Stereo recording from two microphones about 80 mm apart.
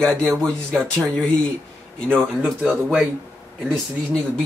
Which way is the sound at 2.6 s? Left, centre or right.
Right.